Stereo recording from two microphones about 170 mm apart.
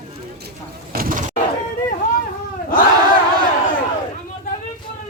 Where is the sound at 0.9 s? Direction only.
55° right (ahead or behind).